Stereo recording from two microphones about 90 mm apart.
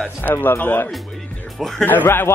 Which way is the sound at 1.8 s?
20° left (ahead or behind).